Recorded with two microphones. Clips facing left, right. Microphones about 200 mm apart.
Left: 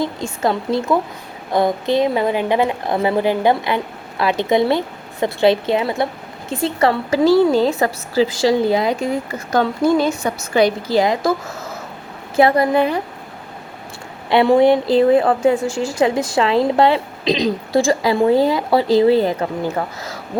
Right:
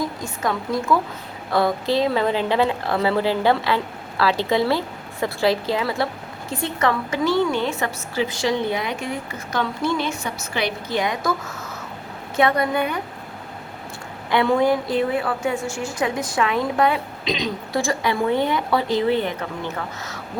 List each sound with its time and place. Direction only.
0.0 s a woman's voice: 25° left (ahead or behind)
12.4 s a woman's voice: 30° left (ahead or behind)
14.3 s a woman's voice: 25° left (ahead or behind)
14.9 s a woman's voice: 40° left (ahead or behind)